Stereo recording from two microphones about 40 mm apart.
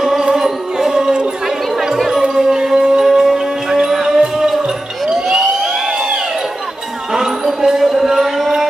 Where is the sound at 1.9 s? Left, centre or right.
Centre.